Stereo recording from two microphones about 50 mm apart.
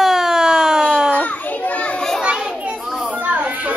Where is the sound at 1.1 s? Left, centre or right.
Left.